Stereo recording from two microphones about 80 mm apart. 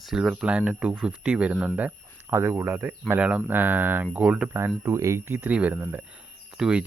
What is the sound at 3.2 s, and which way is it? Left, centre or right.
Speech, centre.